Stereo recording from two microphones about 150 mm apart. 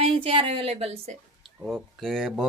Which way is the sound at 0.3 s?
35° right (ahead or behind).